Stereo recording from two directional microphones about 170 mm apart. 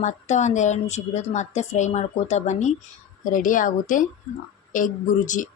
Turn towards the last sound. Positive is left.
turn(degrees=50)  # may be behind; listen again after turning